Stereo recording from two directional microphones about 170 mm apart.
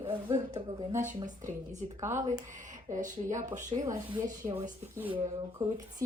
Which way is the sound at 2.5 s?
50° right (ahead or behind).